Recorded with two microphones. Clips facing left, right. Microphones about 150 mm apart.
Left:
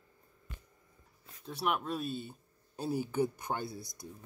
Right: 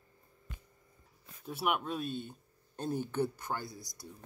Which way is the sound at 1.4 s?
5° right (ahead or behind).